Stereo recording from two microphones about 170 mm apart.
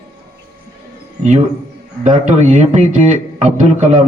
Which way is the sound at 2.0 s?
45° right (ahead or behind).